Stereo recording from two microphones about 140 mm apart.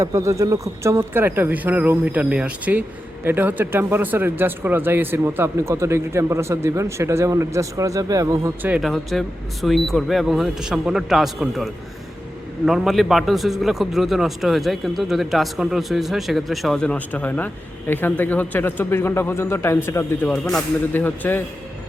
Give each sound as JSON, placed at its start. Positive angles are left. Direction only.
{"t": 0.0, "sound": "speech", "side_deg": -20}
{"t": 8.7, "sound": "a man's voice", "side_deg": 0}